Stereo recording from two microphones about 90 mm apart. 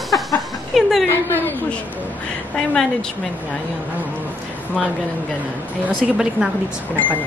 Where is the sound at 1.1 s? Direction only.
25° left (ahead or behind).